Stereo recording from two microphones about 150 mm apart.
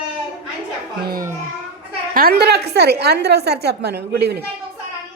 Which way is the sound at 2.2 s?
90° right.